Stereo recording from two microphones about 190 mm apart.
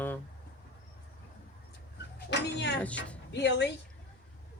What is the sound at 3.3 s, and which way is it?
Speech, 65° left (ahead or behind).